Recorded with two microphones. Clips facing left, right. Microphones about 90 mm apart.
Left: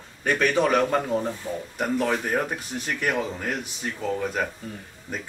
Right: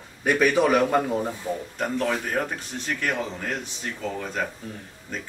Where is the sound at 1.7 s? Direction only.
10° left (ahead or behind).